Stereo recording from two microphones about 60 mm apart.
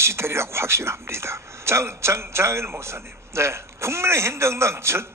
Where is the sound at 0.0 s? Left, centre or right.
Right.